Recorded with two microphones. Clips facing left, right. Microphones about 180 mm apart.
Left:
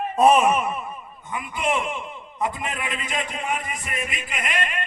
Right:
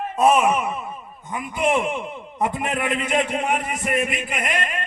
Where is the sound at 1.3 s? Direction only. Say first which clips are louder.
Right 4 dB; 50° right (ahead or behind).